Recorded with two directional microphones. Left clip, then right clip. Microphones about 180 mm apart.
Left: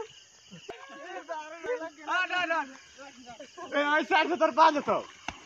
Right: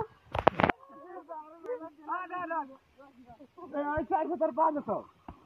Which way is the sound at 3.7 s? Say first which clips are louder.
Left 6 dB; 5° left (ahead or behind).